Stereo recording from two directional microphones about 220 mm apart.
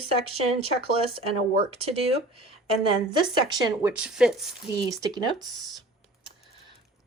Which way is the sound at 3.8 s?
5° right (ahead or behind).